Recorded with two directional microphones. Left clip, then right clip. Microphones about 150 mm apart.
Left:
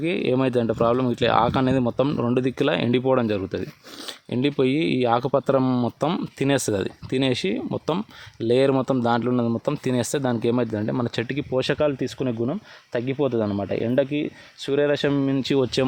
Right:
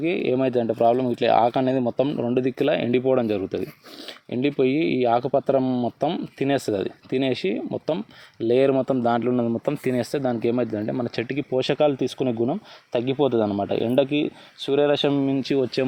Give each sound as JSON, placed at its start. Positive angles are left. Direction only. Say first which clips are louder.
{"t": 0.0, "sound": "speech", "louder": "even", "side_deg": 30}